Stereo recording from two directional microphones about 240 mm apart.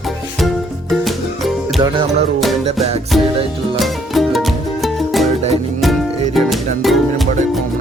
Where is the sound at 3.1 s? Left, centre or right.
Centre.